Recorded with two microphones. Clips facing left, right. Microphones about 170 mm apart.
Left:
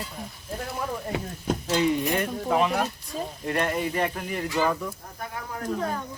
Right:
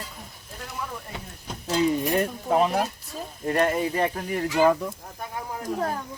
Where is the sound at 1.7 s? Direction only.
35° right (ahead or behind).